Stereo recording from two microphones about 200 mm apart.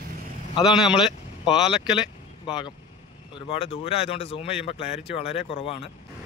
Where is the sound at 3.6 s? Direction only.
30° left (ahead or behind).